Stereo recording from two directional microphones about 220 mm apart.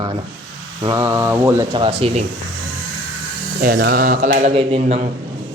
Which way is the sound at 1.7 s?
25° right (ahead or behind).